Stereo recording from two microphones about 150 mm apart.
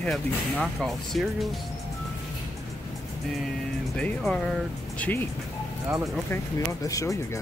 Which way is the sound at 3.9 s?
5° left (ahead or behind).